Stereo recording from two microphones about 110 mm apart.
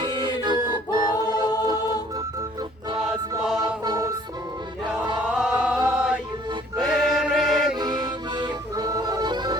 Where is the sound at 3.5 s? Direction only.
40° right (ahead or behind).